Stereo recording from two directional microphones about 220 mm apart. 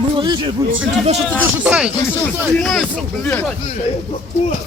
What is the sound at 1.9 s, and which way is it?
Speech, 5° left (ahead or behind).